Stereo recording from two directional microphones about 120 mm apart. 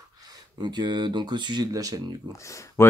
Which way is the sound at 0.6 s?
35° right (ahead or behind).